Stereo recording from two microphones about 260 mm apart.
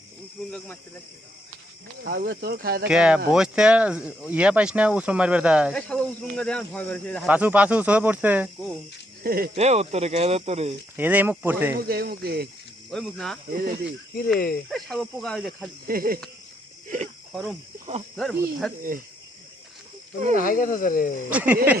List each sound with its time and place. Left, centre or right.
0.4 s speech: centre
2.0 s speech: right
2.8 s speech: centre
9.2 s speech: right
10.9 s speech: centre
11.9 s speech: right
12.9 s speech: centre
13.5 s speech: right
14.7 s speech: centre
15.9 s speech: right
18.2 s speech: centre
18.8 s speech: right
20.3 s speech: left
21.2 s speech: centre